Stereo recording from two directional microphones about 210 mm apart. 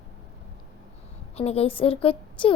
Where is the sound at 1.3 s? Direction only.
30° left (ahead or behind).